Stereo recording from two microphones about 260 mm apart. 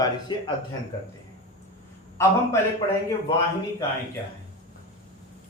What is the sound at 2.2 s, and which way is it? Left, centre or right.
Speech, centre.